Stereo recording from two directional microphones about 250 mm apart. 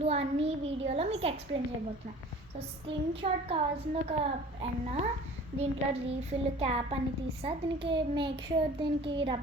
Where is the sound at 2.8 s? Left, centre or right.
Right.